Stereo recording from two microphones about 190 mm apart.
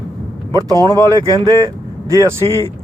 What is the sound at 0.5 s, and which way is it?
Speech, 20° right (ahead or behind).